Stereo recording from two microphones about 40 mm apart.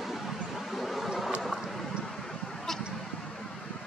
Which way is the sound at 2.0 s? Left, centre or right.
Centre.